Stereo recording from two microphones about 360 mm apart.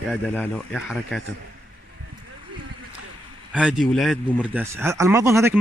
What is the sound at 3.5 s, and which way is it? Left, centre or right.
Speech, centre.